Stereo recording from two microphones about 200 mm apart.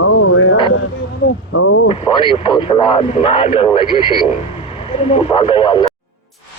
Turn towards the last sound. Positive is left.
turn(degrees=25)  # may be behind; listen again after turning